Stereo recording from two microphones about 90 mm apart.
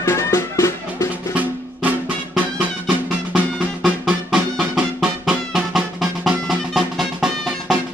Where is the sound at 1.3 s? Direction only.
15° right (ahead or behind).